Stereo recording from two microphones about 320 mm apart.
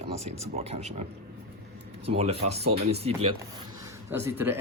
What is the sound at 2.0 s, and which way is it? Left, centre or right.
Speech, centre.